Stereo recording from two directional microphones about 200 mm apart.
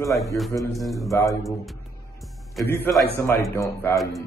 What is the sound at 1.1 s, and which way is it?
Speech, 15° left (ahead or behind).